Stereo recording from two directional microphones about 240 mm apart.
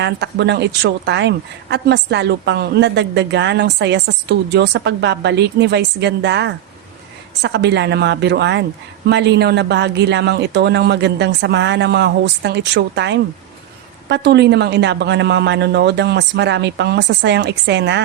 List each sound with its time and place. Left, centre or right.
0.0 s a woman's voice: right